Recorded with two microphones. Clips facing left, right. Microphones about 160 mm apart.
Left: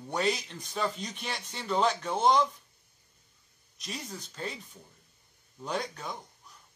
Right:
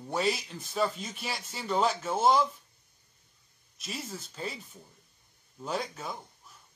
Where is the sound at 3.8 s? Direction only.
5° right (ahead or behind).